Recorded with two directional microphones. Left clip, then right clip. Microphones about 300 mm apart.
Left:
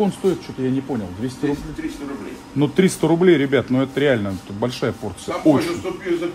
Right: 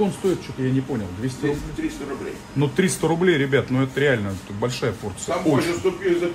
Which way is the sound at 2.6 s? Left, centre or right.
Left.